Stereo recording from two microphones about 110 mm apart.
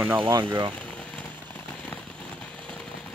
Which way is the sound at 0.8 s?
10° left (ahead or behind).